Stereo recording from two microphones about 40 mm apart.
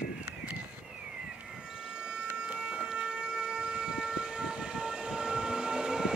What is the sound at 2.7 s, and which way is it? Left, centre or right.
Siren, centre.